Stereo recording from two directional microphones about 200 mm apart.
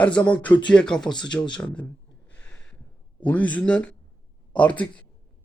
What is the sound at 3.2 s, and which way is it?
A man's voice, 5° left (ahead or behind).